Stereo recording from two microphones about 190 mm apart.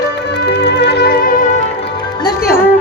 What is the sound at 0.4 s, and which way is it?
Music, 65° left (ahead or behind).